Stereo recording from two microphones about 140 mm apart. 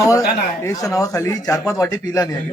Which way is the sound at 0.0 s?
25° left (ahead or behind).